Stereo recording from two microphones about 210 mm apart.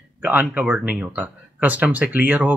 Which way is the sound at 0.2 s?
5° right (ahead or behind).